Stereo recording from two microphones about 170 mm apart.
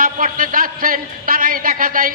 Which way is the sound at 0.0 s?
55° right (ahead or behind).